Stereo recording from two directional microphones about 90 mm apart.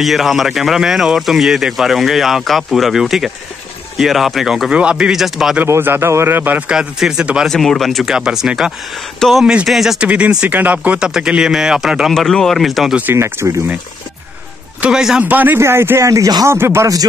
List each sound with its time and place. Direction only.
0.0 s speech: centre (ahead or behind)
5.7 s speech: 25° right (ahead or behind)
6.7 s speech: 10° right (ahead or behind)
7.4 s speech: 5° left (ahead or behind)
12.1 s speech: 5° left (ahead or behind)
13.1 s speech: 30° right (ahead or behind)
14.8 s speech: 10° right (ahead or behind)
15.2 s speech: 20° right (ahead or behind); by 16.4 s 40° right (ahead or behind)
16.4 s speech: 30° right (ahead or behind)